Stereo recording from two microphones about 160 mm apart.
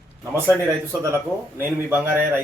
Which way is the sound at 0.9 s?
10° right (ahead or behind).